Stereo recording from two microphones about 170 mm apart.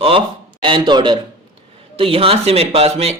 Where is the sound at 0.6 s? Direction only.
30° right (ahead or behind).